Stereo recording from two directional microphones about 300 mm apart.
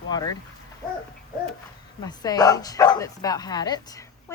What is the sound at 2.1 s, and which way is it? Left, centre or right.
Speech, centre.